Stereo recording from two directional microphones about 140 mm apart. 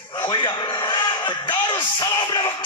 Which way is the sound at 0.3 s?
35° left (ahead or behind).